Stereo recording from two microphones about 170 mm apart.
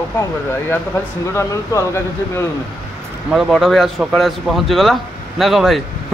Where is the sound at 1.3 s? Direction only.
15° left (ahead or behind).